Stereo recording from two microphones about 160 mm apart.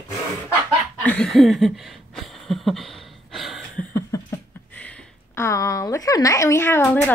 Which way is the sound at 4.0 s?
20° left (ahead or behind).